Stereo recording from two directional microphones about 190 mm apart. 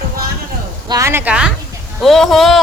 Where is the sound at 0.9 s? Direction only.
15° right (ahead or behind).